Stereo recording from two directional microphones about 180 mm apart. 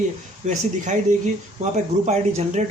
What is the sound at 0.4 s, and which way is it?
Speech, 40° right (ahead or behind).